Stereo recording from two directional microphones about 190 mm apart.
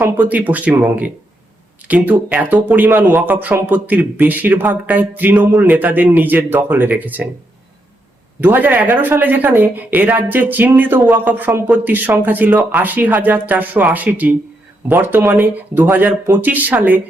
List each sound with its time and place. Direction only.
0.0 s speech: 10° right (ahead or behind)
8.4 s speech: 10° right (ahead or behind)